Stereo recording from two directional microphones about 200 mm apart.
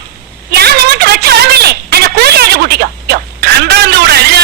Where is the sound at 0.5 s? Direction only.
55° right (ahead or behind).